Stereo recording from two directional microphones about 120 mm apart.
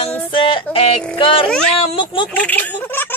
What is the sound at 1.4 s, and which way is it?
Speech, 5° left (ahead or behind).